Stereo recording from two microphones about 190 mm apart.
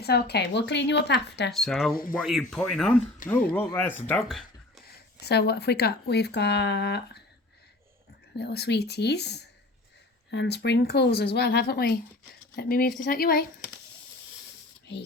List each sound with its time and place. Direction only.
0.0 s speech: 60° left (ahead or behind)
1.5 s speech: centre (ahead or behind)
5.2 s speech: 60° left (ahead or behind)
8.4 s speech: 60° left (ahead or behind)